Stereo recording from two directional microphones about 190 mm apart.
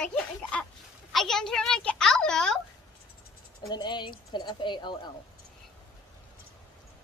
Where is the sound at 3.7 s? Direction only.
25° left (ahead or behind).